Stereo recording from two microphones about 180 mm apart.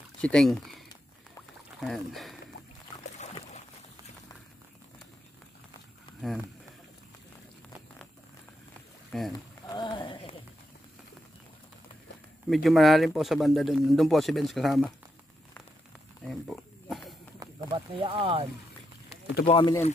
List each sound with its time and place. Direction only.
0.2 s speech: 5° left (ahead or behind)
9.1 s speech: centre (ahead or behind)
9.7 s a sound: 25° left (ahead or behind)
12.4 s speech: centre (ahead or behind)
16.3 s pig: centre (ahead or behind)
17.6 s speech: 30° right (ahead or behind)
19.4 s speech: 30° left (ahead or behind)